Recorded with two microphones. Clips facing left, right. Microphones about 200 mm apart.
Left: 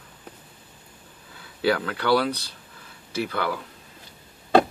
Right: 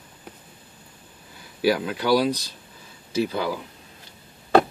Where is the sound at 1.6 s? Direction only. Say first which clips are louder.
Right 1 dB; 15° right (ahead or behind).